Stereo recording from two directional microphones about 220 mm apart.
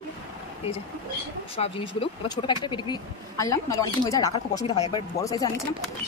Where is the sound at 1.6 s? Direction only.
25° left (ahead or behind).